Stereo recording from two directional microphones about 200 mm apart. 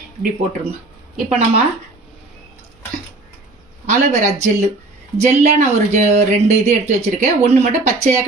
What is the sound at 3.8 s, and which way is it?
Speech, 35° right (ahead or behind).